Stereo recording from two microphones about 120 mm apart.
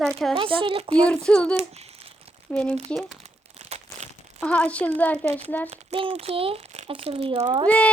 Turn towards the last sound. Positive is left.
turn(degrees=-45)  # may be behind; listen again after turning